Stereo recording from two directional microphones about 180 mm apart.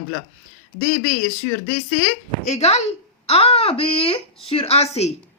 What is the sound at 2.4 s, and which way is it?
Speech, 40° left (ahead or behind).